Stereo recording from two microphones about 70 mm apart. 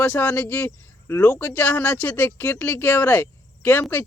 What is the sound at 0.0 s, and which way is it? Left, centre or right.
A man's voice, left.